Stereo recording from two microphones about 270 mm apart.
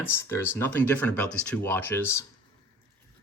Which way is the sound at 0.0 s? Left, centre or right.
Centre.